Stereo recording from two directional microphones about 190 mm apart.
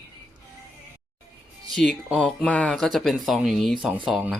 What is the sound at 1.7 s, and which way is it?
Speech, centre (ahead or behind).